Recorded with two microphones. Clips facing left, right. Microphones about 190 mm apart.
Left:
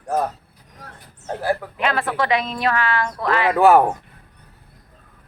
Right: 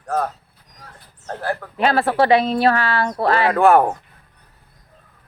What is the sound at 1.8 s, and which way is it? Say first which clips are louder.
Speech: right 10 dB; 35° right (ahead or behind).